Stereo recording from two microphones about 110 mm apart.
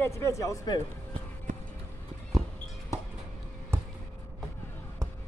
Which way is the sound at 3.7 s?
20° right (ahead or behind).